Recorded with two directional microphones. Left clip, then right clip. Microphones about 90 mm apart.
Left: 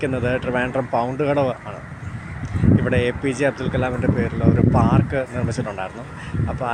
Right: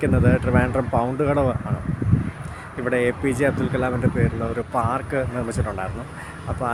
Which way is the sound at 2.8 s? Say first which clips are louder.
Even; 30° right (ahead or behind).